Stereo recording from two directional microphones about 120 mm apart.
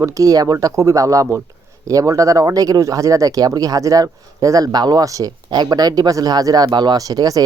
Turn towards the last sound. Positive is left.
turn(degrees=-30)  # may be behind; listen again after turning